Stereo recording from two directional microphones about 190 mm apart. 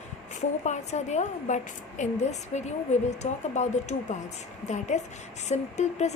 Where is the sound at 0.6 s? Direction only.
35° left (ahead or behind).